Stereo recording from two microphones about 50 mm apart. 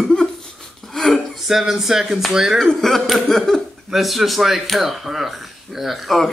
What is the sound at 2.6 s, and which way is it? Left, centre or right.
Speech, centre.